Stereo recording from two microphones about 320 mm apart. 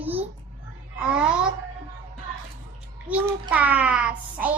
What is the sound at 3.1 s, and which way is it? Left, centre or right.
Child singing, centre.